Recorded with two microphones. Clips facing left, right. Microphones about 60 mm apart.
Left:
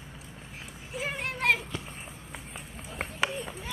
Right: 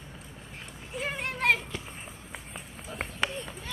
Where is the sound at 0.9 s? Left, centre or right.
Centre.